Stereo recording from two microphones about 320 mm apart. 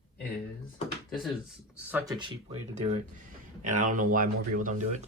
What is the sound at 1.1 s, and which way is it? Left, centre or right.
Speech, centre.